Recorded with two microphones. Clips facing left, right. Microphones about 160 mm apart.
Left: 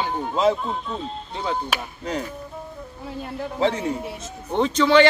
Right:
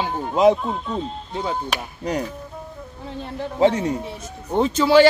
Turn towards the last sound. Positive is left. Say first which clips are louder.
# right 2 dB
turn(degrees=-5)  # may be behind; listen again after turning